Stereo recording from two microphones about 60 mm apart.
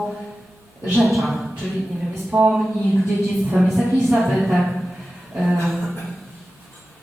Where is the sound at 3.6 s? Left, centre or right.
Centre.